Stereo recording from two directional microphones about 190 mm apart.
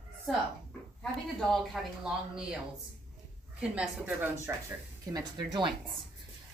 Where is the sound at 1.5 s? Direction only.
Centre (ahead or behind).